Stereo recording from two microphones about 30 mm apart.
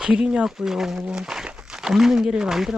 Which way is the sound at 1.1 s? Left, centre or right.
Right.